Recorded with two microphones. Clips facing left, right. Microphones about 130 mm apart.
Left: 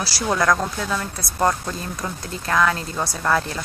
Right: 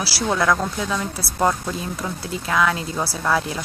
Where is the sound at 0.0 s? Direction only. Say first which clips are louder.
Even; centre (ahead or behind).